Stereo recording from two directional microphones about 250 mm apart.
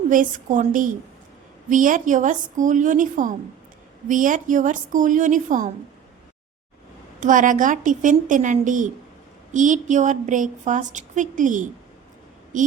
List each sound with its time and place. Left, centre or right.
0.1 s a woman's voice: right
7.2 s a woman's voice: right